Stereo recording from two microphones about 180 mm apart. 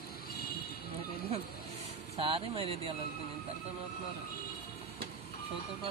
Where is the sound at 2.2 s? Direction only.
30° right (ahead or behind).